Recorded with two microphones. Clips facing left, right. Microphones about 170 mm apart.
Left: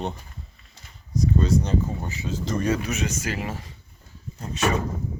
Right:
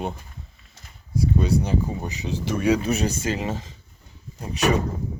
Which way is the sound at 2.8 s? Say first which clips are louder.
Right 4 dB; 35° right (ahead or behind).